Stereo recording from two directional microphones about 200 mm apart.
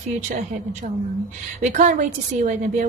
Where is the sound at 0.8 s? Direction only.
40° right (ahead or behind).